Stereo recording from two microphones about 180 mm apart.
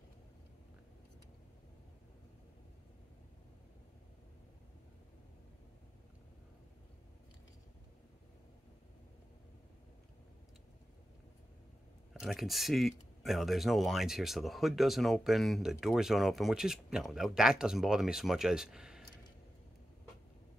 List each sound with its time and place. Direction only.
12.1 s speech: centre (ahead or behind)